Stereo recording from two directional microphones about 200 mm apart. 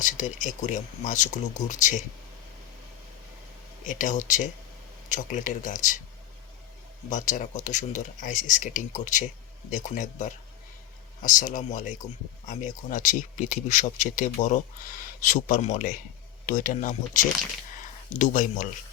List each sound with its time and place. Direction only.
0.0 s speech: 40° left (ahead or behind)
3.8 s speech: 40° left (ahead or behind)
7.1 s speech: 40° left (ahead or behind)